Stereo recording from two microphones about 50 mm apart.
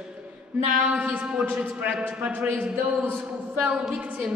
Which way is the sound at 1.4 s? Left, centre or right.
Right.